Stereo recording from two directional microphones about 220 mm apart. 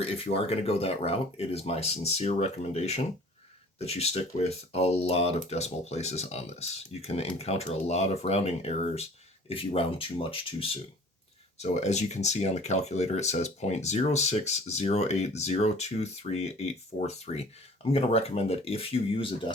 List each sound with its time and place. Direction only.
0.0 s speech: 25° left (ahead or behind)